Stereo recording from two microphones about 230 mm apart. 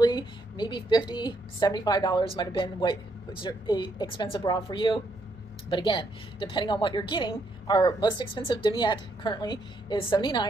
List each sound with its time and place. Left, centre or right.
0.0 s a woman's voice: centre